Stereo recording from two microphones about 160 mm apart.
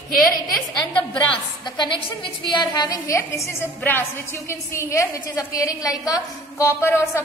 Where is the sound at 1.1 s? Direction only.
30° left (ahead or behind).